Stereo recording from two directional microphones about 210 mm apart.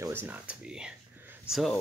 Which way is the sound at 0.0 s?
10° right (ahead or behind).